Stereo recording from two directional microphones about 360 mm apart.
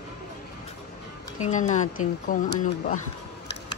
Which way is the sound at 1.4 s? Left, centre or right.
Centre.